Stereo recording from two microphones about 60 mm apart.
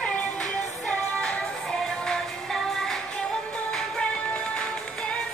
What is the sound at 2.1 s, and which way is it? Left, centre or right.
Music, centre.